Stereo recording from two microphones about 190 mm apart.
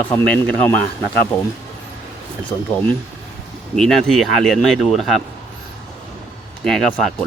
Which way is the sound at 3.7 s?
Centre (ahead or behind).